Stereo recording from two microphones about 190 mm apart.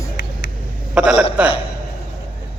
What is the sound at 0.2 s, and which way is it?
Vehicle, 60° left (ahead or behind).